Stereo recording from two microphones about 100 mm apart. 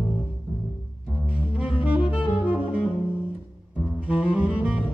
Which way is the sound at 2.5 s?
15° right (ahead or behind).